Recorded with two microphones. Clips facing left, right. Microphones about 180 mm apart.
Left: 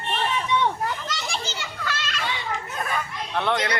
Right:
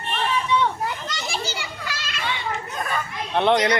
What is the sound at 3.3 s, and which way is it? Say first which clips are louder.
Speech: right 6 dB; 20° right (ahead or behind).